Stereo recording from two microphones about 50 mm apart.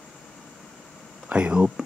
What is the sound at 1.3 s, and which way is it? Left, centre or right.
Speech, right.